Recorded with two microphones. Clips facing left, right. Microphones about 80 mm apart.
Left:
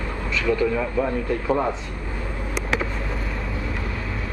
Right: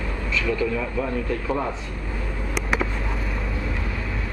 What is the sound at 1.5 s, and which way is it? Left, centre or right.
Speech, centre.